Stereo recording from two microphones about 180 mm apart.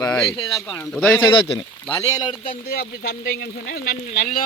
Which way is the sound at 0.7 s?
5° left (ahead or behind).